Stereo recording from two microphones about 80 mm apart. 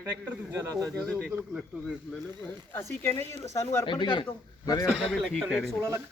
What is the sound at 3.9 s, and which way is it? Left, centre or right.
Speech, left.